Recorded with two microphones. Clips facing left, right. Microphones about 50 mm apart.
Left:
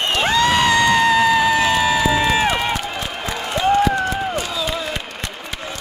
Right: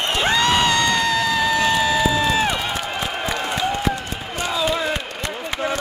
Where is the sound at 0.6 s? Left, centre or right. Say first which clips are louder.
Left 4 dB; centre.